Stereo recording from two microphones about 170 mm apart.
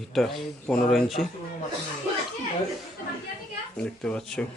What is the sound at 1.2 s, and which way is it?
Speech, 65° left (ahead or behind).